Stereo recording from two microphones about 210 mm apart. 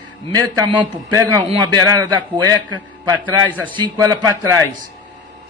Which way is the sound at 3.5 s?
10° left (ahead or behind).